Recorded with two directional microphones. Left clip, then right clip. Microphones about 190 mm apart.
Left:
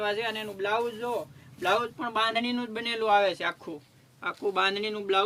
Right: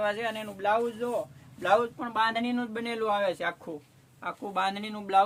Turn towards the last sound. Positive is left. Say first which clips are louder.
# left 2 dB
turn(degrees=-35)  # may be behind; listen again after turning